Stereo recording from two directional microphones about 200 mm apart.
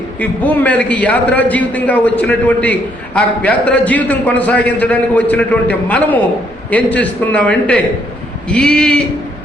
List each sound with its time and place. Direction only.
0.2 s a man's voice: 10° left (ahead or behind)